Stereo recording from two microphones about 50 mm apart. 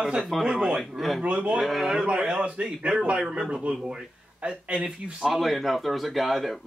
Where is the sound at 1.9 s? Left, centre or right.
Right.